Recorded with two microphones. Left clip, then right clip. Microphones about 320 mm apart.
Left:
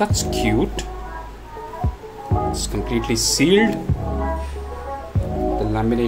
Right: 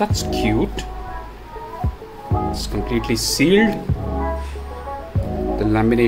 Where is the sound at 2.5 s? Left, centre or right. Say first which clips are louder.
Even; centre.